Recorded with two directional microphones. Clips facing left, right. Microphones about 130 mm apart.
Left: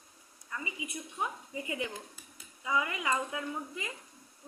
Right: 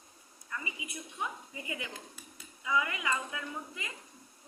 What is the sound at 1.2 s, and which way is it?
A woman's voice, 30° left (ahead or behind).